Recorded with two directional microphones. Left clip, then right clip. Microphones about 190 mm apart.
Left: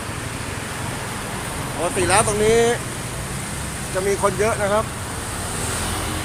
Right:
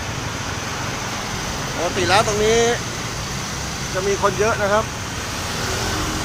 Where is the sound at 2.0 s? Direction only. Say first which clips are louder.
Right 1 dB; 20° left (ahead or behind).